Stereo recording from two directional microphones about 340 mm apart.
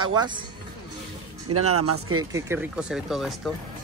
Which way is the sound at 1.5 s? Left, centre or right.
Right.